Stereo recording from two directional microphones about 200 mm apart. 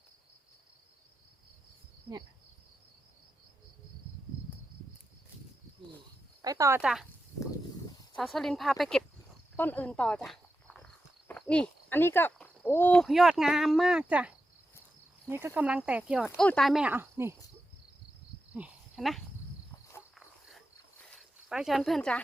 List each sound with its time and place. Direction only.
6.4 s speech: 15° right (ahead or behind)
6.8 s speech: centre (ahead or behind)
8.1 s speech: centre (ahead or behind)
18.5 s speech: 5° right (ahead or behind)
21.1 s a sound: centre (ahead or behind)